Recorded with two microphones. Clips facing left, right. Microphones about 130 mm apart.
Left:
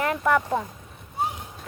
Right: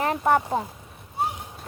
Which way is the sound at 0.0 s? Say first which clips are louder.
Right 1 dB; 35° right (ahead or behind).